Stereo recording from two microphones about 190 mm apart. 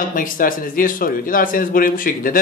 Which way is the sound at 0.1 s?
45° left (ahead or behind).